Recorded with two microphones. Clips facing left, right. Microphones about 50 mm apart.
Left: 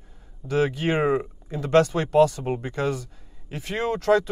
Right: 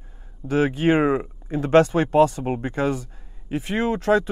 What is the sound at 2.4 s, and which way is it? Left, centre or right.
Speech, centre.